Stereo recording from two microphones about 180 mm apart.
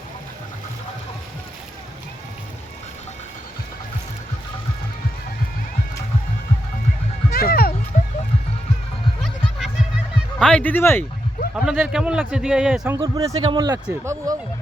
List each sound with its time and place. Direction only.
7.3 s run: 60° left (ahead or behind)
7.9 s music: 45° left (ahead or behind)
9.2 s music: centre (ahead or behind)
10.4 s speech: 5° left (ahead or behind)
11.5 s a man's voice: 5° right (ahead or behind)
13.0 s a man's voice: 20° right (ahead or behind)